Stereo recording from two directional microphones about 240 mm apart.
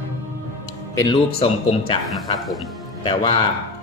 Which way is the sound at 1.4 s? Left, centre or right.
Left.